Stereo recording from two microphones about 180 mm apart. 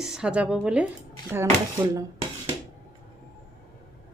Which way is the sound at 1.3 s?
15° right (ahead or behind).